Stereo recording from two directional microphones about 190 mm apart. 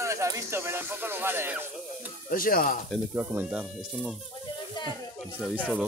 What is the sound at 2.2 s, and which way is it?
Speech, 50° left (ahead or behind).